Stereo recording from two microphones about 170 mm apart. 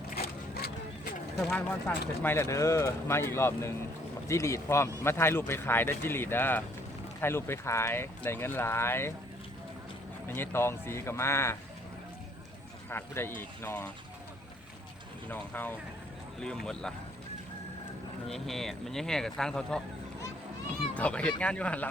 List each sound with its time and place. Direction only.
0.2 s a sound: 70° left (ahead or behind)
1.4 s speech: 5° left (ahead or behind)
2.2 s speech: 15° left (ahead or behind)
10.2 s speech: 10° left (ahead or behind)
12.9 s speech: 15° left (ahead or behind)
15.3 s speech: 10° left (ahead or behind)
18.3 s speech: centre (ahead or behind)
20.9 s speech: 5° left (ahead or behind)